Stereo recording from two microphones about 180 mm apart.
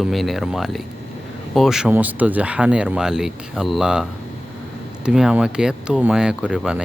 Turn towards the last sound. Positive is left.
turn(degrees=-5)  # may be behind; listen again after turning